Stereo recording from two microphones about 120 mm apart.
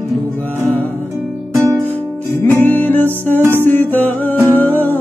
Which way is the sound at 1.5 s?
25° right (ahead or behind).